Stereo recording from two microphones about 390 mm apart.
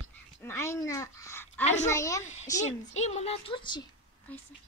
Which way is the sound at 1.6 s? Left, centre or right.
Centre.